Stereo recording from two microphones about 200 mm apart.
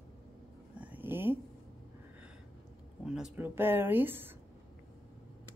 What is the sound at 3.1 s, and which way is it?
Speech, 5° right (ahead or behind).